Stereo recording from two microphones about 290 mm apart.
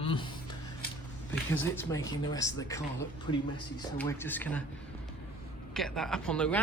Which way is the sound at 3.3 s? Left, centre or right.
Left.